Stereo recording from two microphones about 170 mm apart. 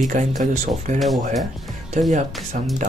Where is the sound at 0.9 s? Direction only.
45° right (ahead or behind).